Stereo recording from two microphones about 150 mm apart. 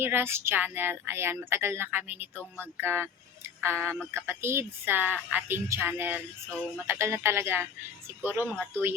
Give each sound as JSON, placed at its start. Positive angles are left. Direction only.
{"t": 0.0, "sound": "speech", "side_deg": -15}